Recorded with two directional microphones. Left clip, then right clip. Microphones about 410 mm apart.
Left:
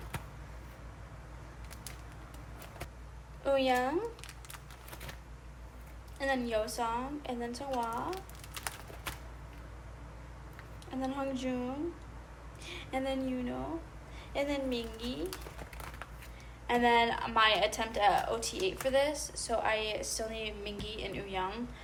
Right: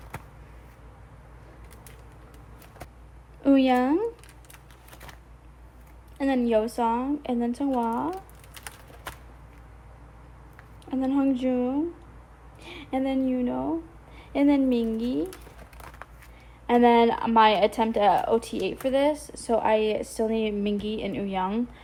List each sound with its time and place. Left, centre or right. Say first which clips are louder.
3.4 s speech: right 7 dB; centre
6.1 s a woman's voice: right 8 dB; centre
8.5 s a sound: left 1 dB; centre
10.8 s a woman's voice: right 11 dB; centre
16.6 s a woman's voice: right 8 dB; centre